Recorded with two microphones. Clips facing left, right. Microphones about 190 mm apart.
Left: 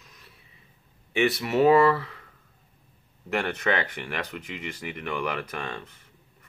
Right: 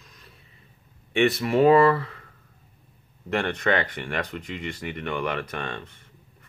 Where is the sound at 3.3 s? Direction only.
5° left (ahead or behind).